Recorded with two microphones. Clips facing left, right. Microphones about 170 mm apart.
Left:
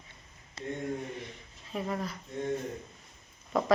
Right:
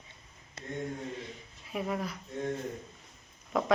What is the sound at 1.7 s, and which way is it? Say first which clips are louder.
Speech: even; 5° right (ahead or behind).